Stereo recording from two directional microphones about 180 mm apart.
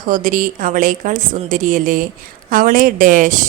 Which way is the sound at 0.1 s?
45° right (ahead or behind).